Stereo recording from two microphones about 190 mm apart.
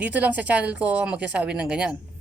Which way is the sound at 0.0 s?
10° right (ahead or behind).